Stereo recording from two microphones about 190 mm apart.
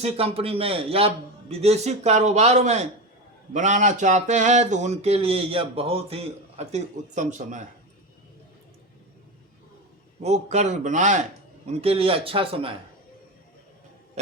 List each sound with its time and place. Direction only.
0.0 s speech: 30° right (ahead or behind)
10.2 s a man's voice: 35° right (ahead or behind)